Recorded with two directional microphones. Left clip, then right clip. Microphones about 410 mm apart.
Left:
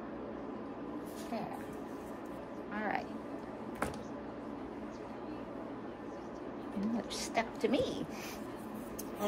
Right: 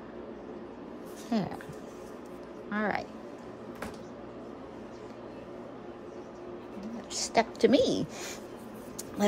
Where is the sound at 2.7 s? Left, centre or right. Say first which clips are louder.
Right 6 dB; centre.